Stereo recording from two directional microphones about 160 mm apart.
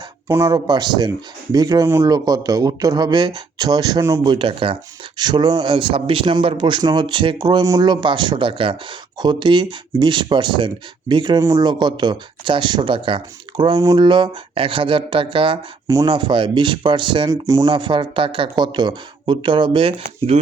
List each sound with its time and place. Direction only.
0.3 s speech: 20° right (ahead or behind); by 20.4 s 35° right (ahead or behind)